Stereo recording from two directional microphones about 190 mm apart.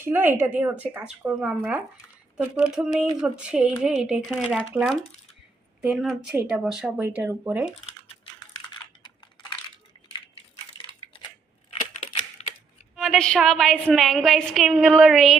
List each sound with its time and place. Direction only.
0.0 s a woman's voice: 10° right (ahead or behind)
7.9 s typing: 25° left (ahead or behind)
12.4 s music: 35° left (ahead or behind)
13.0 s a woman's voice: centre (ahead or behind)